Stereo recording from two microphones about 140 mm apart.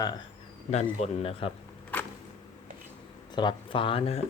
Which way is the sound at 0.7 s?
55° left (ahead or behind).